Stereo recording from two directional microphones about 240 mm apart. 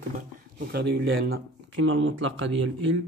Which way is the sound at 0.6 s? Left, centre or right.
Right.